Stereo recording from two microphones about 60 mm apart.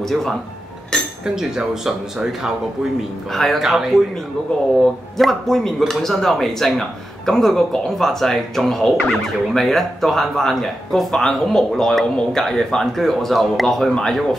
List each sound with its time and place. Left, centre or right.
0.0 s speech: centre
1.2 s speech: centre
3.3 s speech: centre
5.1 s speech: centre